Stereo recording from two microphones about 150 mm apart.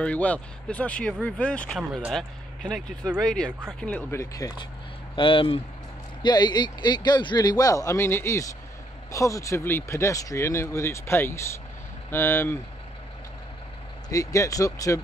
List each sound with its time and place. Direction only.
0.0 s speech: 10° left (ahead or behind)
4.2 s speech: 25° left (ahead or behind)
5.1 s speech: 35° left (ahead or behind); by 12.5 s 15° left (ahead or behind)
14.0 s speech: 20° left (ahead or behind)